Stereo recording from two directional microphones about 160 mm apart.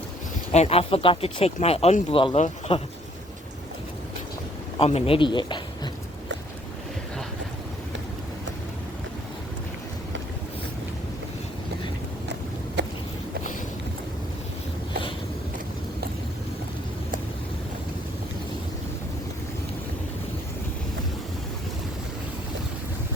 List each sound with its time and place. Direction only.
0.5 s speech: 40° left (ahead or behind)
4.8 s speech: 40° left (ahead or behind)
12.8 s boat: 90° right